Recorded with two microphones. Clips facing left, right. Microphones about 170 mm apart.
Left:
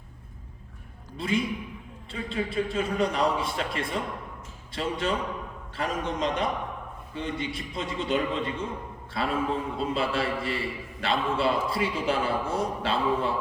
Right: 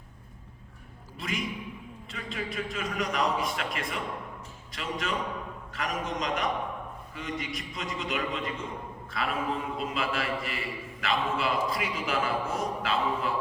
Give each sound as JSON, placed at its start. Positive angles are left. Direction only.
{"t": 1.2, "sound": "a man's voice", "side_deg": 30}